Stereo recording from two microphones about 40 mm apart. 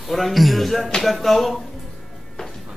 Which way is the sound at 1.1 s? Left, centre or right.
Centre.